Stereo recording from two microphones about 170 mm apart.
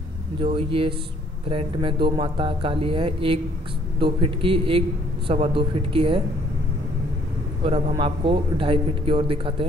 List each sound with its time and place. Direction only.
0.4 s speech: 30° right (ahead or behind)
7.6 s speech: 35° right (ahead or behind)